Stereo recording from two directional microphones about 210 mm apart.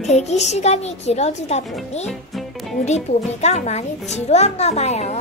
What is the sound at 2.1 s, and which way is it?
Music, centre (ahead or behind).